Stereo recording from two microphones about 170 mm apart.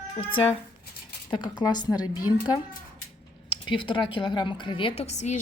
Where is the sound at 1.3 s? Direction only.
25° left (ahead or behind).